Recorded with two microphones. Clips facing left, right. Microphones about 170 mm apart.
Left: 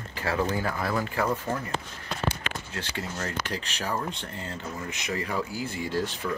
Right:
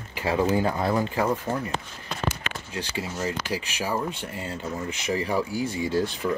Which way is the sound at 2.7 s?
10° right (ahead or behind).